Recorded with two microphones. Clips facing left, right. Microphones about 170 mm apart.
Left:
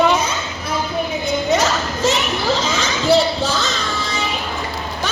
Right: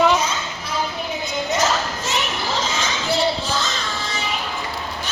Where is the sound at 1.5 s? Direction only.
65° left (ahead or behind).